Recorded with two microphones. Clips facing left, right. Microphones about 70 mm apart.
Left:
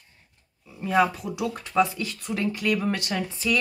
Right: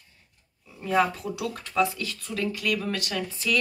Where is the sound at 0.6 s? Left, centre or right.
Centre.